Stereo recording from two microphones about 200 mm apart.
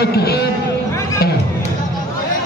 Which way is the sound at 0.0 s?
50° left (ahead or behind).